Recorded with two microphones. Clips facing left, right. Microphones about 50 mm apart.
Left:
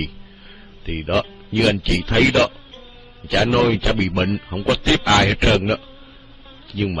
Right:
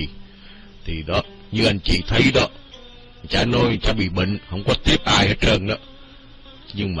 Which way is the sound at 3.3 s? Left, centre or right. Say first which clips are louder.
Left 2 dB; centre.